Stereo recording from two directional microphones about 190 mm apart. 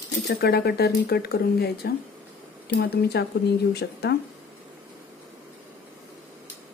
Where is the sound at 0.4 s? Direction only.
55° left (ahead or behind).